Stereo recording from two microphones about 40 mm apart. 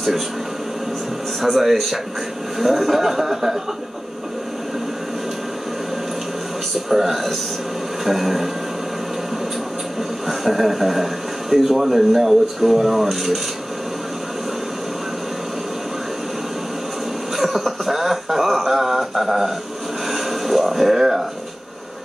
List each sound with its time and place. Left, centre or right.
1.4 s speech: centre
6.7 s speech: centre
10.2 s speech: centre
17.4 s a sound: centre